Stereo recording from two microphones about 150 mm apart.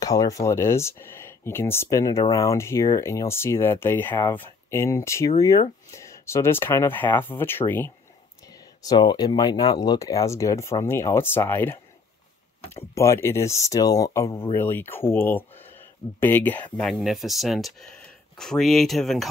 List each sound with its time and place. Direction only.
0.0 s speech: 25° left (ahead or behind)
8.8 s speech: 30° left (ahead or behind)
12.9 s speech: 20° left (ahead or behind); by 19.2 s centre (ahead or behind)